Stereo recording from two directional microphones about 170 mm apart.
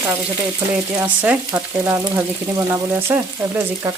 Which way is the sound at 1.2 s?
15° right (ahead or behind).